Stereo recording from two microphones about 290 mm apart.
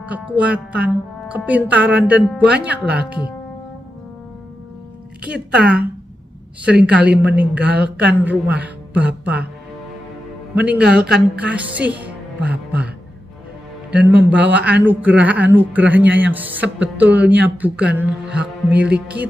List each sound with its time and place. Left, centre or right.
0.0 s speech: centre
5.2 s speech: centre
10.5 s speech: centre
13.9 s speech: centre